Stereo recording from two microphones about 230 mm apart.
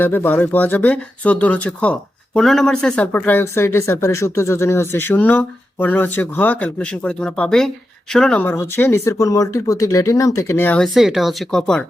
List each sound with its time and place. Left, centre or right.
0.0 s speech: centre